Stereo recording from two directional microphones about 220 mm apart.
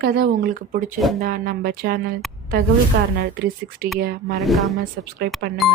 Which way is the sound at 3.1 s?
45° right (ahead or behind).